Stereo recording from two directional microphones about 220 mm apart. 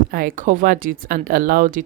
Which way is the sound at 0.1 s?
40° right (ahead or behind).